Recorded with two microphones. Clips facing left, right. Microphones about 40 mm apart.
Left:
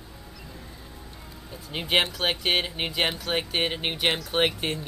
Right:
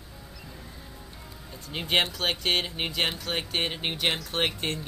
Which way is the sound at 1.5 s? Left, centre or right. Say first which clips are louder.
Left 2 dB; centre.